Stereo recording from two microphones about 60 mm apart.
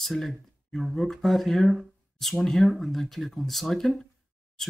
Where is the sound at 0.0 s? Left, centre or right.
Centre.